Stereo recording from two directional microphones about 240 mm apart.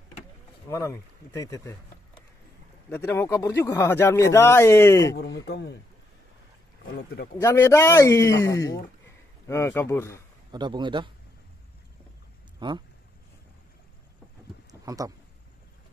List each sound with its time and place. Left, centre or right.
0.7 s speech: centre
2.9 s speech: centre
5.5 s speech: left
7.3 s speech: centre
10.5 s a man's voice: centre
12.5 s speech: centre
14.7 s a sound: centre